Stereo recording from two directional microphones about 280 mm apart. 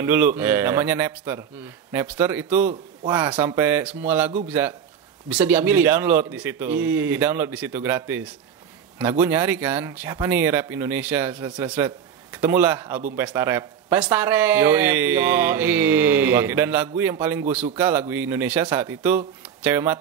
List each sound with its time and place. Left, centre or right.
0.0 s a man's voice: centre